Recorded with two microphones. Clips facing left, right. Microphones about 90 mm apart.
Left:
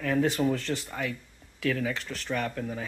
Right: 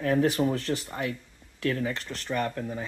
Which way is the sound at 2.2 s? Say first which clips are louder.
Right 2 dB; 5° right (ahead or behind).